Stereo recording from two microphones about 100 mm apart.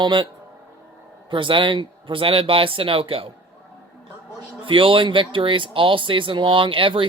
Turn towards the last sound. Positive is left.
turn(degrees=-60)  # may be behind; listen again after turning